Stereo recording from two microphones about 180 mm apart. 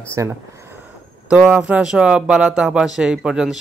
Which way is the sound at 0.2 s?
15° right (ahead or behind).